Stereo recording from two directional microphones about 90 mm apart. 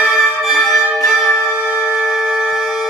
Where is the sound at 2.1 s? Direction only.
5° right (ahead or behind).